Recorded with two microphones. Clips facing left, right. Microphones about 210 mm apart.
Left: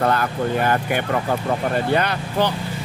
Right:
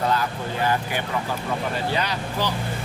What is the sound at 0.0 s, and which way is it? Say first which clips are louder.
Speech: left 4 dB; 60° left (ahead or behind).